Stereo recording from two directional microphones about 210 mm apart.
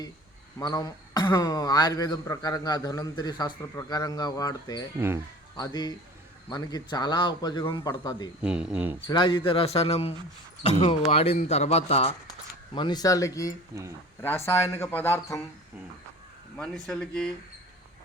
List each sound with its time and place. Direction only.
0.6 s speech: 20° left (ahead or behind)
4.9 s speech: 10° right (ahead or behind)
5.5 s speech: 20° left (ahead or behind)
8.4 s speech: 5° right (ahead or behind)
9.0 s speech: 20° left (ahead or behind)
16.6 s speech: centre (ahead or behind)